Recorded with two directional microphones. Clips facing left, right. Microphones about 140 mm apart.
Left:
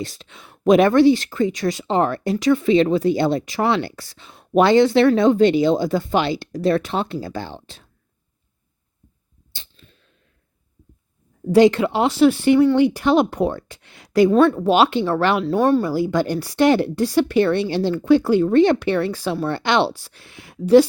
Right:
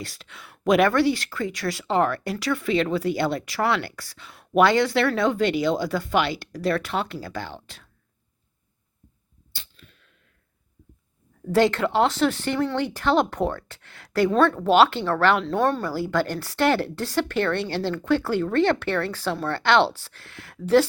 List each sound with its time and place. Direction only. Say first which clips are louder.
0.0 s speech: left 7 dB; 25° left (ahead or behind)
9.5 s a sound: left 1 dB; 25° left (ahead or behind)
11.5 s speech: left 6 dB; 15° left (ahead or behind)